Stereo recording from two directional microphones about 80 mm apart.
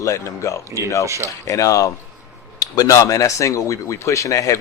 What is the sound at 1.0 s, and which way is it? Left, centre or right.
Speech, right.